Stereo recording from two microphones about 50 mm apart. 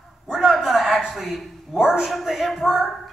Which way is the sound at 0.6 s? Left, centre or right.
Centre.